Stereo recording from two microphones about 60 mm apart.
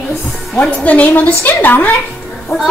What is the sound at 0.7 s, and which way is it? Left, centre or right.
Speech, left.